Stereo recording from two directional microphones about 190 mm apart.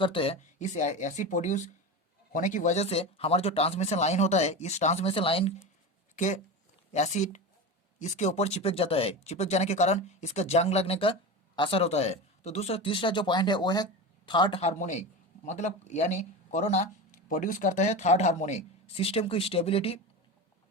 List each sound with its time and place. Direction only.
0.0 s speech: 30° left (ahead or behind)
14.6 s speech: 40° left (ahead or behind)